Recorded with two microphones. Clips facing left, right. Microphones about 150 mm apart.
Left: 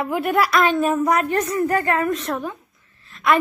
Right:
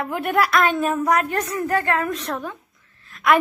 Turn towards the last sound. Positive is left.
turn(degrees=0)  # may be behind; listen again after turning